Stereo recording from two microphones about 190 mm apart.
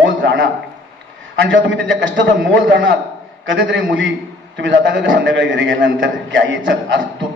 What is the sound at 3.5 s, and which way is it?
A man's voice, 70° right (ahead or behind).